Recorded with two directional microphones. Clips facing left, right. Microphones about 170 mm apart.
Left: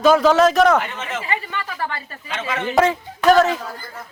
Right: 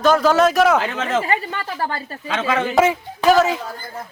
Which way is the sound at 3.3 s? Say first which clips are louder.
Left 1 dB; 5° right (ahead or behind).